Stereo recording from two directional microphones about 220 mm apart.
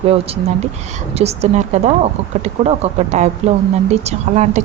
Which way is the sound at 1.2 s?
30° right (ahead or behind).